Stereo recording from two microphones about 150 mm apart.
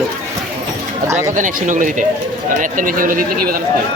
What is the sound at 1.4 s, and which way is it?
Speech, 60° right (ahead or behind).